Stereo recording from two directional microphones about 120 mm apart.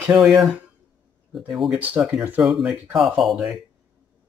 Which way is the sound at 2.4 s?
5° right (ahead or behind).